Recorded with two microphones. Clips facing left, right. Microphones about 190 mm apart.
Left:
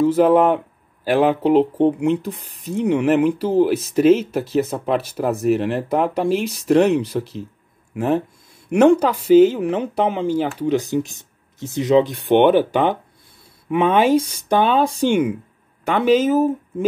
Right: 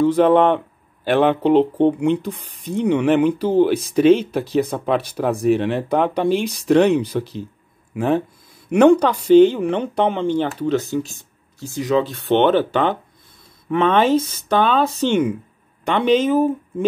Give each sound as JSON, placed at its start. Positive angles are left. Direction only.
{"t": 0.0, "sound": "speech", "side_deg": 5}